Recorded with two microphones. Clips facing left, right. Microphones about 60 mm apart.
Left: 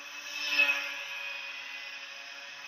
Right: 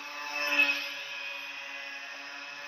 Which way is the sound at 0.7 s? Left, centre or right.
Centre.